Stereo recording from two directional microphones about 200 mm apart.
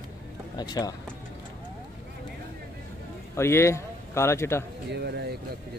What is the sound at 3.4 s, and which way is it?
A man's voice, 15° left (ahead or behind).